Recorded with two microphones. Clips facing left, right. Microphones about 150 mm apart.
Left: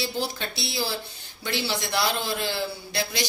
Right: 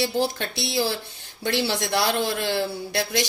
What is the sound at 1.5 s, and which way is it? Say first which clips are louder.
A man's voice: right 4 dB; 70° right (ahead or behind).